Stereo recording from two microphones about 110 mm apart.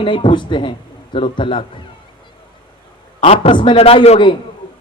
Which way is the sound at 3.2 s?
70° left (ahead or behind).